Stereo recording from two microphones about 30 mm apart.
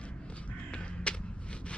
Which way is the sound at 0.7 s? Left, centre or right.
Left.